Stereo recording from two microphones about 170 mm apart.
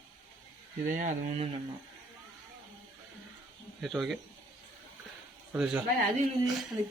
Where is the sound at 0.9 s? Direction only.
50° right (ahead or behind).